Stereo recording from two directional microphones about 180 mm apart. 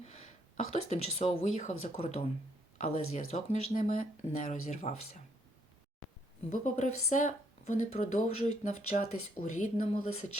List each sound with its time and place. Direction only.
0.0 s speech: 40° left (ahead or behind)
6.5 s speech: 45° left (ahead or behind)